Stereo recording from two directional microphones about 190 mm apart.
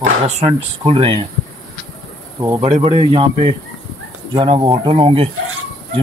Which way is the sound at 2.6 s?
35° right (ahead or behind).